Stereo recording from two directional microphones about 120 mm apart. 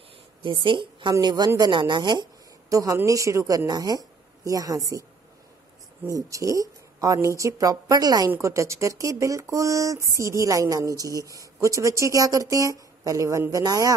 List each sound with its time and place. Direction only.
0.4 s a woman's voice: 45° right (ahead or behind)
2.7 s speech: 30° right (ahead or behind)
6.0 s speech: 30° right (ahead or behind)